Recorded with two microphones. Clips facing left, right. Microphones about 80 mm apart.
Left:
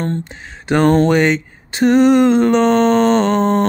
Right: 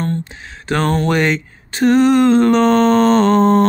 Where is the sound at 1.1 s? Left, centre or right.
Centre.